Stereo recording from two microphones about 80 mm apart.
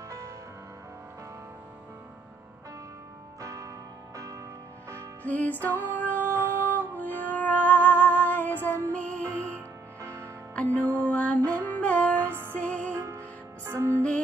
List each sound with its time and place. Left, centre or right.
3.3 s music: right
5.2 s music: left
10.0 s music: right
10.5 s music: centre
12.9 s music: right